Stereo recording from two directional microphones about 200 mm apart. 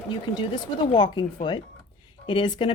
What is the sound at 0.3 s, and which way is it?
Speech, 25° left (ahead or behind).